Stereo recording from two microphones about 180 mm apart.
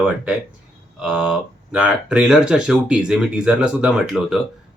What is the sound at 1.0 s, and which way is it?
Speech, 5° right (ahead or behind).